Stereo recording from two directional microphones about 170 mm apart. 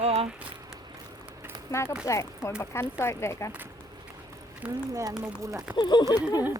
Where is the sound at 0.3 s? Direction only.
5° right (ahead or behind).